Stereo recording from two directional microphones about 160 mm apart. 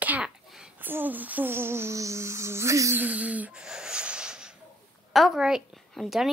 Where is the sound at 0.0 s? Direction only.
5° right (ahead or behind).